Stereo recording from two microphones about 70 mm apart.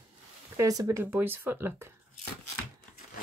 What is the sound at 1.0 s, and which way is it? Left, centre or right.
Speech, right.